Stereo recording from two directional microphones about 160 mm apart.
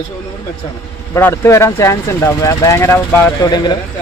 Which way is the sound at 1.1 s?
15° left (ahead or behind).